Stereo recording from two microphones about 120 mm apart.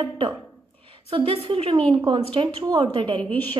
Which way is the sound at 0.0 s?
45° right (ahead or behind).